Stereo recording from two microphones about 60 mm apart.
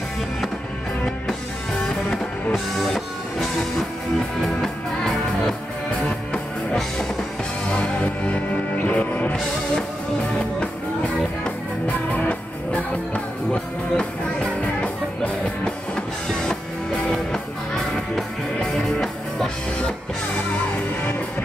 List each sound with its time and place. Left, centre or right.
1.8 s music: centre; by 9.4 s left
11.9 s music: left
17.1 s music: centre